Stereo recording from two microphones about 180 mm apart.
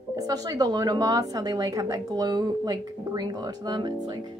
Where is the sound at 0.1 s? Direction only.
20° right (ahead or behind).